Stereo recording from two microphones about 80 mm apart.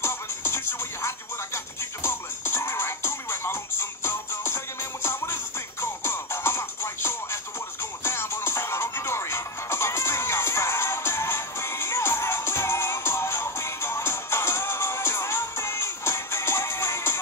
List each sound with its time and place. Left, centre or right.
0.0 s music: left